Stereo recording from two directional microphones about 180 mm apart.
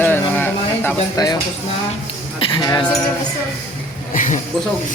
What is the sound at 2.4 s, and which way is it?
Speech, 25° left (ahead or behind).